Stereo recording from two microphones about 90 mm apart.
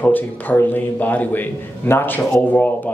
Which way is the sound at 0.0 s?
20° left (ahead or behind).